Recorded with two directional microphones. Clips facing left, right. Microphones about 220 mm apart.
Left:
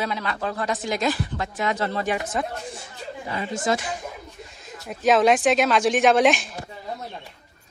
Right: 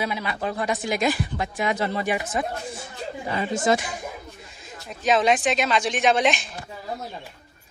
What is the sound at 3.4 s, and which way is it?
Speech, 15° right (ahead or behind).